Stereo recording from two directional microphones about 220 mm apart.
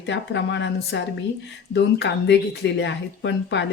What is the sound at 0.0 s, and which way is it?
Speech, 55° left (ahead or behind).